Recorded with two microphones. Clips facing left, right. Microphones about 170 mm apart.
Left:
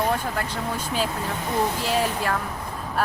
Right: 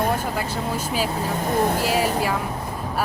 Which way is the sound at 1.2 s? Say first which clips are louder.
Right 3 dB; 50° right (ahead or behind).